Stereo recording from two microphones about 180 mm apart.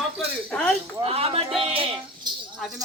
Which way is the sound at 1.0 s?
35° right (ahead or behind).